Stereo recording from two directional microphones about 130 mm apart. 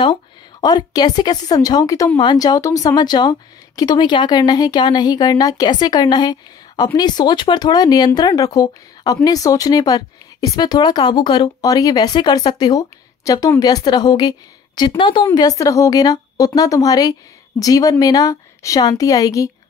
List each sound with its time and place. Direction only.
0.0 s a woman's voice: 35° left (ahead or behind)